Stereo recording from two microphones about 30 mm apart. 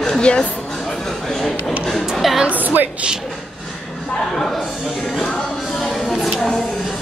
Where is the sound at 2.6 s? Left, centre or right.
Right.